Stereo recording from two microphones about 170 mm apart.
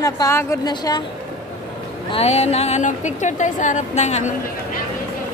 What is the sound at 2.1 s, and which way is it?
A woman's voice, 40° left (ahead or behind).